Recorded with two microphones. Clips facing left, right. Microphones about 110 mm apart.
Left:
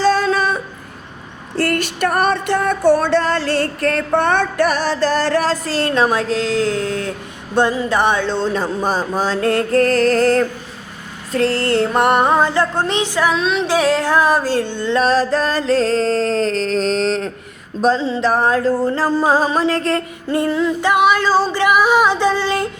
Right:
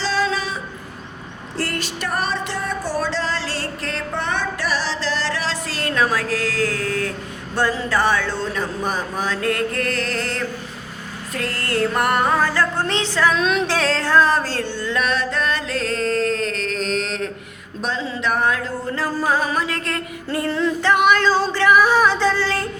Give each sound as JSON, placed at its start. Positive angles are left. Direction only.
{"t": 0.0, "sound": "female singing", "side_deg": 50}
{"t": 1.5, "sound": "a sound", "side_deg": 60}
{"t": 7.5, "sound": "speech", "side_deg": 20}
{"t": 11.3, "sound": "speech", "side_deg": 30}
{"t": 13.3, "sound": "a sound", "side_deg": 0}
{"t": 13.7, "sound": "music", "side_deg": 15}
{"t": 20.5, "sound": "female singing", "side_deg": 5}